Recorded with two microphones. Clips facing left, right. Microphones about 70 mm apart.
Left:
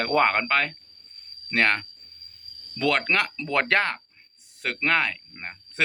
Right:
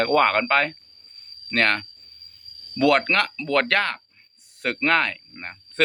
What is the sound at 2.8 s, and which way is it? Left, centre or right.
Speech, centre.